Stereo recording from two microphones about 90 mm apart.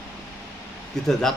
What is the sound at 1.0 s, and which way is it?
Speech, 5° left (ahead or behind).